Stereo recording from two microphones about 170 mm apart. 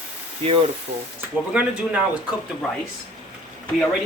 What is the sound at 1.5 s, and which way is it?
Speech, 10° right (ahead or behind).